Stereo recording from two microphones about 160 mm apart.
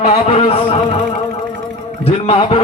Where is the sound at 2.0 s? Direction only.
35° left (ahead or behind).